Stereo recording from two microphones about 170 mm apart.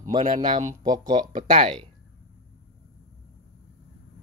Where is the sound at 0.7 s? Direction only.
20° right (ahead or behind).